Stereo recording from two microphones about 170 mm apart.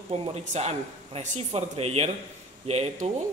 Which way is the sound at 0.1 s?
40° right (ahead or behind).